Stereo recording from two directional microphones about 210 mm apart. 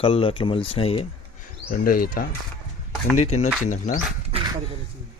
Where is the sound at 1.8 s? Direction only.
45° left (ahead or behind).